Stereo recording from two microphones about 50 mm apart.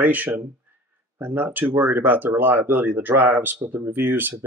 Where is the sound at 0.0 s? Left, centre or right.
Right.